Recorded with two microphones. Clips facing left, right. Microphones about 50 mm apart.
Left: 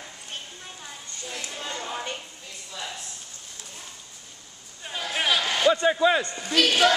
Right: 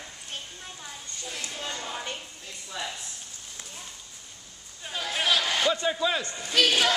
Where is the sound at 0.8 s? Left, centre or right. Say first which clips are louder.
Left 1 dB; centre.